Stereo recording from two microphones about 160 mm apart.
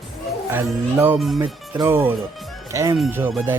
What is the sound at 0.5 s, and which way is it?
Speech, 10° right (ahead or behind).